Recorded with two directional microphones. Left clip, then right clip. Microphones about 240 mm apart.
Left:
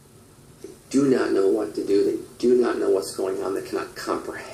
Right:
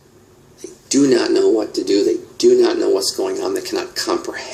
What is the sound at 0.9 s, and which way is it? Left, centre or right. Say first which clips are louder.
Speech: right 6 dB; right.